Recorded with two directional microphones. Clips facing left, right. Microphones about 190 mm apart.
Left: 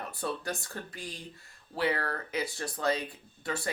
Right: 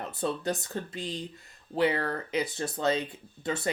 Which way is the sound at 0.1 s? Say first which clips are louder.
Right 6 dB; 20° right (ahead or behind).